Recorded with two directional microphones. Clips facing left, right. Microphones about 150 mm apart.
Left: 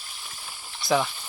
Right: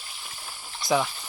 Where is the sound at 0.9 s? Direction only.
5° right (ahead or behind).